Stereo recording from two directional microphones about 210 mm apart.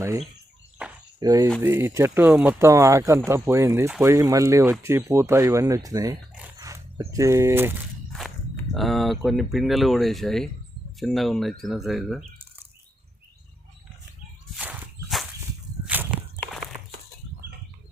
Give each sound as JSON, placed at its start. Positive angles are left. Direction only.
{"t": 1.2, "sound": "speech", "side_deg": -15}
{"t": 8.7, "sound": "speech", "side_deg": 0}
{"t": 14.5, "sound": "walk", "side_deg": -5}
{"t": 16.4, "sound": "a sound", "side_deg": 0}